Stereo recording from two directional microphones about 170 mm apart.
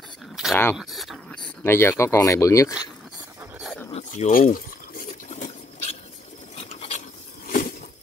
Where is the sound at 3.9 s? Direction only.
45° left (ahead or behind).